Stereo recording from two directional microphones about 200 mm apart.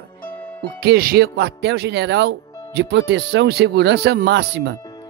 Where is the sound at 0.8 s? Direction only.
50° right (ahead or behind).